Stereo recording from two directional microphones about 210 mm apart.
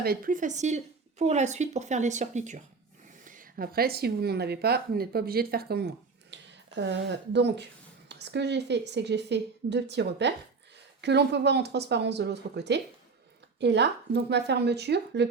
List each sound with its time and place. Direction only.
0.0 s a woman's voice: 45° right (ahead or behind)